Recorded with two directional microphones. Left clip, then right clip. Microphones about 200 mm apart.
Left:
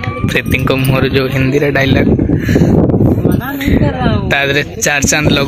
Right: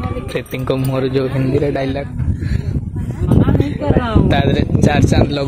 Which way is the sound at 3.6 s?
5° right (ahead or behind).